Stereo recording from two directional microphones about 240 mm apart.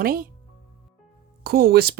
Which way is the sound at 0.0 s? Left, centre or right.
Right.